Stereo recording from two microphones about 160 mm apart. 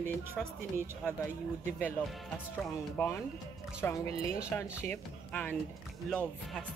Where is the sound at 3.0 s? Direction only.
10° left (ahead or behind).